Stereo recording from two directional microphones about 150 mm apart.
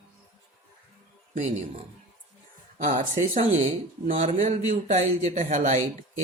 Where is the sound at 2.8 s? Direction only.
60° right (ahead or behind).